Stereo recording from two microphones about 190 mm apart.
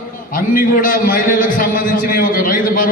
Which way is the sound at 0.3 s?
45° left (ahead or behind).